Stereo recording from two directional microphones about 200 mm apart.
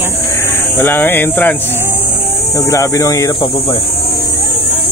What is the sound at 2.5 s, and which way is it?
Speech, 15° left (ahead or behind).